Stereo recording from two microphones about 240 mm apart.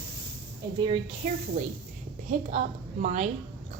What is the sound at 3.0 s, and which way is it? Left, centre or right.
Speech, right.